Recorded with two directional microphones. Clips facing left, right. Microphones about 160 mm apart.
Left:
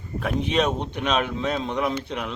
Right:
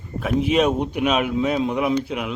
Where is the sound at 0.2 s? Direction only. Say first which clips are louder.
Right 4 dB; 5° right (ahead or behind).